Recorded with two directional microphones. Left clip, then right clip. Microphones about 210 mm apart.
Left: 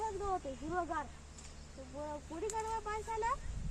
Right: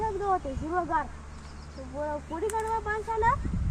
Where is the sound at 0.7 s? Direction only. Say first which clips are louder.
Right 10 dB; 15° left (ahead or behind).